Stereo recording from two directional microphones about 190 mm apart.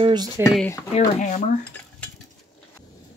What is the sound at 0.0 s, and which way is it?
Speech, 20° right (ahead or behind).